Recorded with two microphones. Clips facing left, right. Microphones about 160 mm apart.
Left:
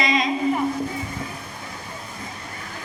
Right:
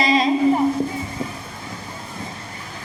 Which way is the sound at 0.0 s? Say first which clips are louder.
Right 5 dB; 35° right (ahead or behind).